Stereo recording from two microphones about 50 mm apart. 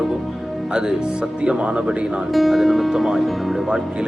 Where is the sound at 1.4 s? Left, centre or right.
Right.